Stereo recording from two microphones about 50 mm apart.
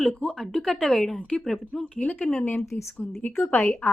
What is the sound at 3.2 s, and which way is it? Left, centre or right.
Speech, left.